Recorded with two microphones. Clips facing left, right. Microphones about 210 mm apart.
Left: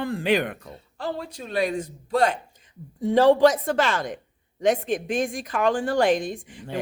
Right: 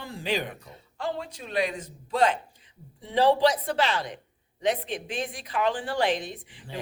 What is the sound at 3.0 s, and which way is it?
A man's voice, 45° left (ahead or behind).